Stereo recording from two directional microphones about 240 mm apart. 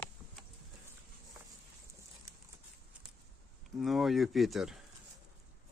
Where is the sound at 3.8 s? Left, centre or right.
Centre.